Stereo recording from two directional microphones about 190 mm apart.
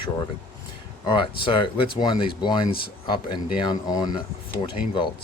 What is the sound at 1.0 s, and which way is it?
Speech, 25° left (ahead or behind).